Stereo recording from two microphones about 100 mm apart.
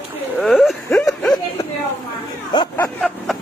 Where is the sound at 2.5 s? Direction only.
50° left (ahead or behind).